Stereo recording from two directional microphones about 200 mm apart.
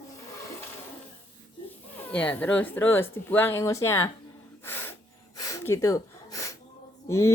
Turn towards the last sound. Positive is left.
turn(degrees=15)  # may be behind; listen again after turning